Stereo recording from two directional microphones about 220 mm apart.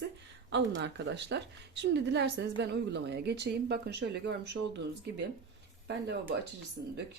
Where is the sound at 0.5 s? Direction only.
50° right (ahead or behind).